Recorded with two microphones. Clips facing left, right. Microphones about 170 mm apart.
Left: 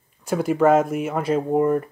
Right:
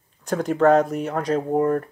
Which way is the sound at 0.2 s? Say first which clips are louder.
Even; 10° left (ahead or behind).